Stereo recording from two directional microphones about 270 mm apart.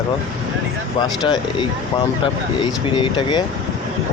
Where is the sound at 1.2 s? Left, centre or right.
Centre.